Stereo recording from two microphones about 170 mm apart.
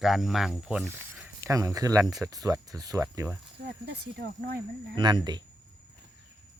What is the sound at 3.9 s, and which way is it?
Speech, 70° right (ahead or behind).